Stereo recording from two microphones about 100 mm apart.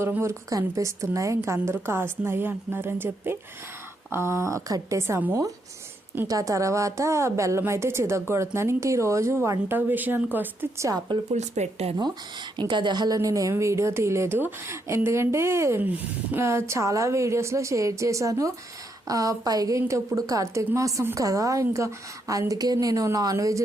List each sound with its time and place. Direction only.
0.2 s a woman's voice: 30° right (ahead or behind)
10.8 s a woman's voice: 40° right (ahead or behind)
11.6 s speech: 90° right
12.5 s a woman's voice: 50° right (ahead or behind); by 23.6 s 35° right (ahead or behind)